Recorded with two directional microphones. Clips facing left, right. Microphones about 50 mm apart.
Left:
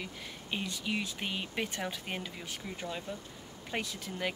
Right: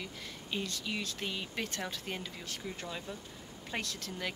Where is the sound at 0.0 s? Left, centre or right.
Centre.